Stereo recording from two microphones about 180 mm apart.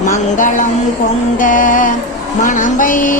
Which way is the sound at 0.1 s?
45° left (ahead or behind).